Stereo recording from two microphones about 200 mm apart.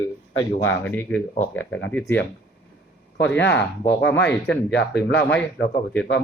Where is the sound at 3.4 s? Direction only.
60° left (ahead or behind).